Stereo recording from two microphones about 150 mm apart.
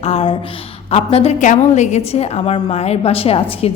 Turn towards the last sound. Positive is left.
turn(degrees=40)  # may be behind; listen again after turning